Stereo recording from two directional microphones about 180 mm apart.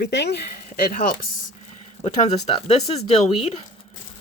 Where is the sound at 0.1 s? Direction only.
70° left (ahead or behind).